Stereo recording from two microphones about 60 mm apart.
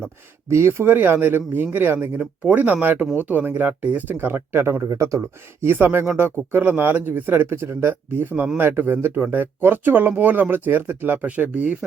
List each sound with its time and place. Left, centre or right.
0.5 s speech: right
2.5 s speech: right
4.9 s speech: right
5.6 s speech: right
7.5 s speech: right